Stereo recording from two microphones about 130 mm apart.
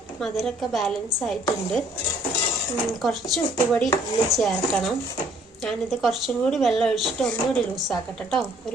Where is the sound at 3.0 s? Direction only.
Centre (ahead or behind).